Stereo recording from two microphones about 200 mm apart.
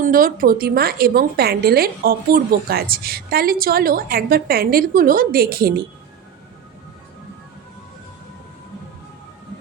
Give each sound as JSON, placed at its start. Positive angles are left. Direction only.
{"t": 0.0, "sound": "a woman's voice", "side_deg": -45}